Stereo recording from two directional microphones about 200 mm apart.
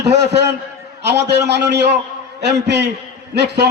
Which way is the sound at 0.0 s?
60° right (ahead or behind).